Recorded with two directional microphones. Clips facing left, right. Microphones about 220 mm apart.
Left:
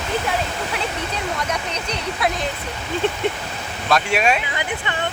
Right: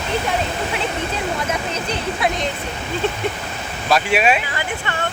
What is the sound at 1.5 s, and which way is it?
Speech, 5° right (ahead or behind).